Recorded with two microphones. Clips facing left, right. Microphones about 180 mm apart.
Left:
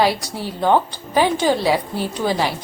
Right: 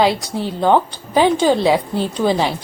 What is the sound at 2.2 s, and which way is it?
Speech, 5° left (ahead or behind).